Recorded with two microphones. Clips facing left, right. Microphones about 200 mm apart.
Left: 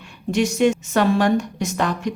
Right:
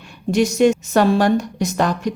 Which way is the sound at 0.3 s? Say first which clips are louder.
Right 3 dB; 40° right (ahead or behind).